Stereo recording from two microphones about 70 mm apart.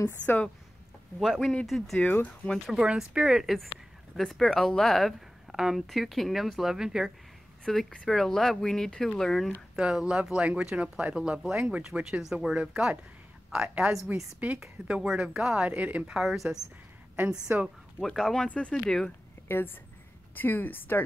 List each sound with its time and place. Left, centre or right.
0.2 s a woman's voice: left
1.2 s a woman's voice: centre
2.0 s a woman's voice: left
2.7 s speech: centre
4.2 s a woman's voice: centre
7.6 s a woman's voice: centre
9.8 s speech: centre
15.7 s speech: right
16.1 s a woman's voice: centre
17.5 s speech: centre
18.0 s a woman's voice: centre
19.4 s a woman's voice: left